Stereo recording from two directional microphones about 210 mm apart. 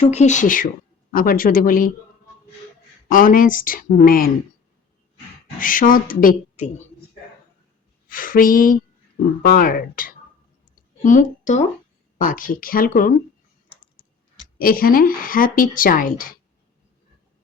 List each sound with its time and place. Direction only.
0.1 s speech: 35° left (ahead or behind)
3.1 s speech: 40° left (ahead or behind)
5.5 s speech: 40° left (ahead or behind)
8.0 s a sound: 40° left (ahead or behind)
9.4 s a woman's voice: 45° left (ahead or behind)
14.6 s speech: 45° left (ahead or behind)